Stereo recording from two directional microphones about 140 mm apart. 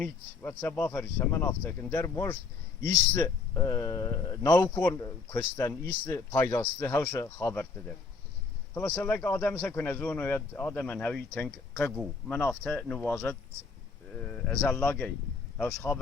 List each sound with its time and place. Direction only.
0.0 s speech: 10° left (ahead or behind)